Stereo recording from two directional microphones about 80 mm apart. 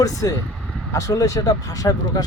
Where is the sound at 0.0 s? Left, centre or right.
Left.